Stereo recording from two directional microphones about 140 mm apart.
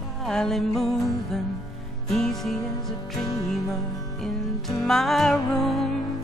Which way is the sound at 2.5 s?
25° left (ahead or behind).